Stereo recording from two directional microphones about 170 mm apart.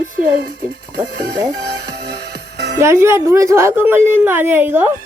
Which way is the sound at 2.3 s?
80° right.